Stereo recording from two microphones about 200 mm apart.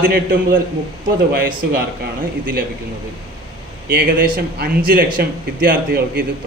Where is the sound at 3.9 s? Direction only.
45° right (ahead or behind).